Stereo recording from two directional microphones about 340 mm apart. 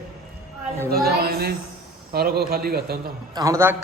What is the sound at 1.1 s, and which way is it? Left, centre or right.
A man's voice, right.